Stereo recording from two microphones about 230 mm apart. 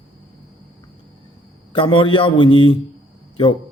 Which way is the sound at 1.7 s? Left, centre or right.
Left.